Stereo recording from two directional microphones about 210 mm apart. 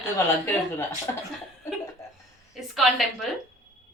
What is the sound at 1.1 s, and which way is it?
Speech, 15° left (ahead or behind).